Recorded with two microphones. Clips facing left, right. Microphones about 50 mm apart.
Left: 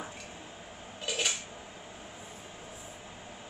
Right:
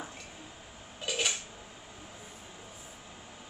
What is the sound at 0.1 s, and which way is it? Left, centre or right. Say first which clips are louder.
Squish: left 2 dB; centre.